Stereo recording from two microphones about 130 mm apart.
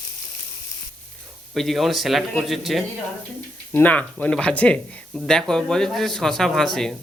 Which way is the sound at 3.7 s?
10° left (ahead or behind).